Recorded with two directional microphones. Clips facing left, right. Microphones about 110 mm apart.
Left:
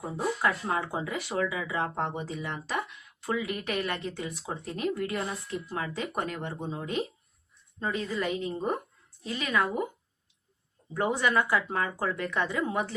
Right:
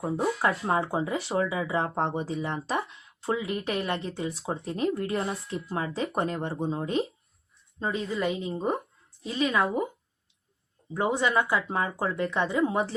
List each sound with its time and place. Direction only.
0.0 s speech: 25° right (ahead or behind)
10.9 s speech: 20° right (ahead or behind)